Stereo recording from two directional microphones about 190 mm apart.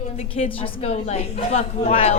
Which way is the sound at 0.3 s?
30° left (ahead or behind).